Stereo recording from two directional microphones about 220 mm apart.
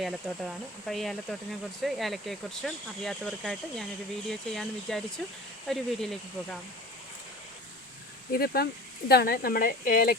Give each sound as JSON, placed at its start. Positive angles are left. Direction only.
{"t": 0.0, "sound": "speech", "side_deg": 0}
{"t": 8.3, "sound": "speech", "side_deg": 45}